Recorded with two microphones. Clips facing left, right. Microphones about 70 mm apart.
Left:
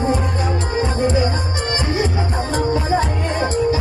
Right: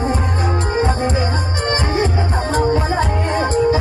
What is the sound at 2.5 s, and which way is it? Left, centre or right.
Music, right.